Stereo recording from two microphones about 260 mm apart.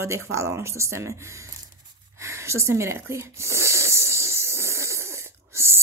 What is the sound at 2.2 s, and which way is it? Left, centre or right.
Wheeze, centre.